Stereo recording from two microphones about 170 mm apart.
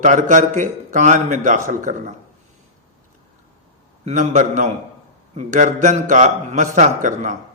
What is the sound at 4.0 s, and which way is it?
A man's voice, 45° right (ahead or behind).